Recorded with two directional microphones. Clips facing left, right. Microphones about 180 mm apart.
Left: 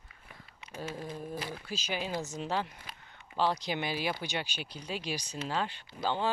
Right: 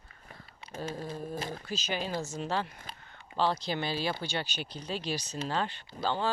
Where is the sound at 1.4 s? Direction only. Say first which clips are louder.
Right 2 dB; 45° right (ahead or behind).